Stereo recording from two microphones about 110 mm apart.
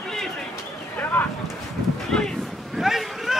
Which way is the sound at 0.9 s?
15° left (ahead or behind).